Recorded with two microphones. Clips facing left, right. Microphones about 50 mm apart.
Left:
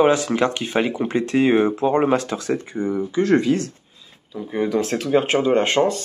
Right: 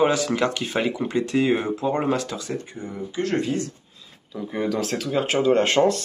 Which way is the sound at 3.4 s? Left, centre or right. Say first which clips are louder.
Left 6 dB; left.